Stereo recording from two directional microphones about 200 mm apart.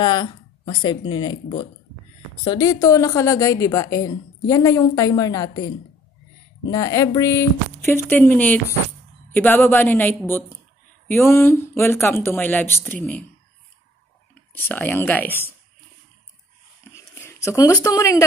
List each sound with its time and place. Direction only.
0.0 s speech: 20° left (ahead or behind)
2.4 s a woman's voice: 20° left (ahead or behind)
6.7 s a woman's voice: 15° left (ahead or behind)
14.5 s a woman's voice: 10° left (ahead or behind)
16.9 s a sound: 15° left (ahead or behind)